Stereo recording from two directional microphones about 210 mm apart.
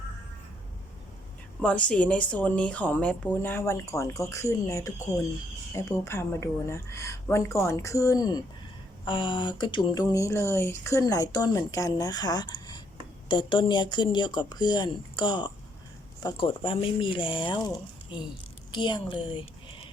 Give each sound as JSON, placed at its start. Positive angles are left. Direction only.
{"t": 1.6, "sound": "a woman's voice", "side_deg": 5}
{"t": 18.7, "sound": "a woman's voice", "side_deg": 20}